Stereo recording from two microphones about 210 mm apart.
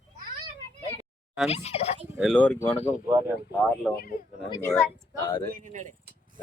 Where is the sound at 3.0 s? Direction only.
10° right (ahead or behind).